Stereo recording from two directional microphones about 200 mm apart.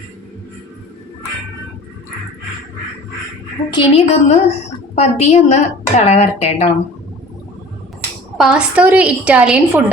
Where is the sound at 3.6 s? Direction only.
25° left (ahead or behind).